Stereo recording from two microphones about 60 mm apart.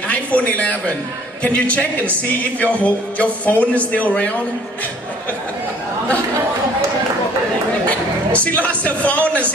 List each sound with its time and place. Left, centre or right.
0.1 s a man's voice: left
7.9 s a man's voice: left